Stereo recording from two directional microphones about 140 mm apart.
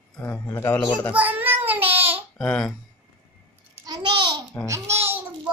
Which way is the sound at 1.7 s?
15° right (ahead or behind).